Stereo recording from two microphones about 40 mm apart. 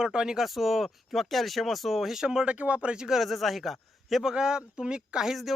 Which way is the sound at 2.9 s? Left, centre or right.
Centre.